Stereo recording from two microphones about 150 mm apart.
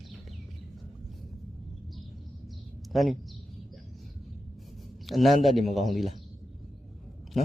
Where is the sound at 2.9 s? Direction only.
Centre (ahead or behind).